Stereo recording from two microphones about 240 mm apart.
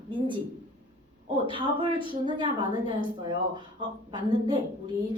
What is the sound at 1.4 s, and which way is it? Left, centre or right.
A woman's voice, right.